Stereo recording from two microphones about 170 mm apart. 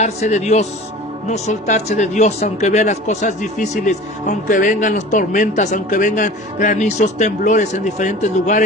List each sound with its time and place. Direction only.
0.0 s a man's voice: 40° left (ahead or behind)